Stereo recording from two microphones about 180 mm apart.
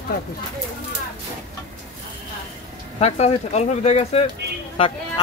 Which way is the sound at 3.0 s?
35° left (ahead or behind).